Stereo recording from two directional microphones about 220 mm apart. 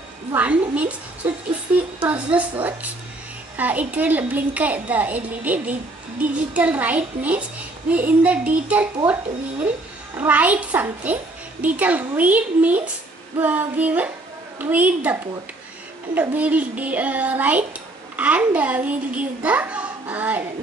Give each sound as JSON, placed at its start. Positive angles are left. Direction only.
{"t": 0.3, "sound": "a child's voice", "side_deg": -5}
{"t": 3.5, "sound": "a child's voice", "side_deg": -5}
{"t": 16.2, "sound": "a child's voice", "side_deg": -5}